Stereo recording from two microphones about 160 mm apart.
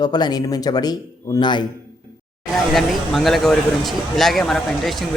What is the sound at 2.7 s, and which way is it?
Speech, centre (ahead or behind).